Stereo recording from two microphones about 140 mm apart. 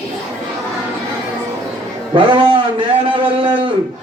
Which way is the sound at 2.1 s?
40° right (ahead or behind).